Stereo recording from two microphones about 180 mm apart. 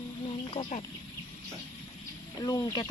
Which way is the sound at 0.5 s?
35° left (ahead or behind).